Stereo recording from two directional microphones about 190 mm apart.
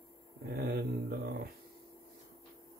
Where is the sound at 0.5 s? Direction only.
55° right (ahead or behind).